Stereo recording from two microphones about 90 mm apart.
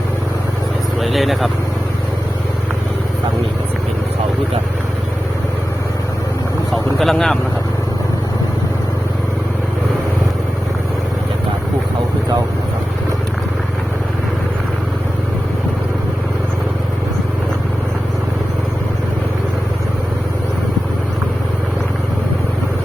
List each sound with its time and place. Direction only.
1.0 s speech: centre (ahead or behind)
7.0 s speech: 5° left (ahead or behind)